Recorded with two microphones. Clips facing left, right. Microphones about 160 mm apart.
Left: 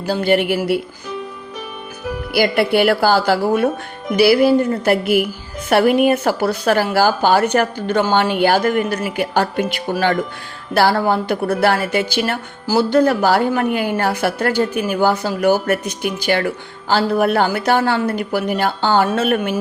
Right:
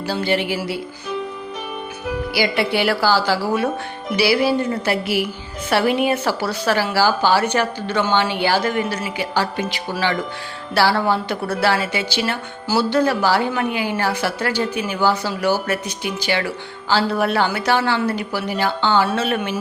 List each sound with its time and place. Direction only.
0.1 s a woman's voice: 50° left (ahead or behind)
2.3 s a woman's voice: 55° left (ahead or behind)